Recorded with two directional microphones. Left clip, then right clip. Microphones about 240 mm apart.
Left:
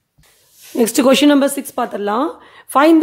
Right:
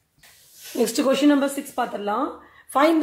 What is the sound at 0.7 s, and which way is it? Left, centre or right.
Speech, left.